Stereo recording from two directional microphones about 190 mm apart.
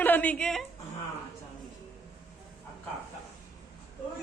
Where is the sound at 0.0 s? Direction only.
10° left (ahead or behind).